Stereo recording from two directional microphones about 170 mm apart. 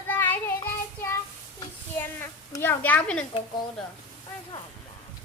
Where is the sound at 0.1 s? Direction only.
10° left (ahead or behind).